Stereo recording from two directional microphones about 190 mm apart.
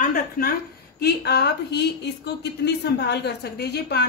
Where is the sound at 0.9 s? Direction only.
60° left (ahead or behind).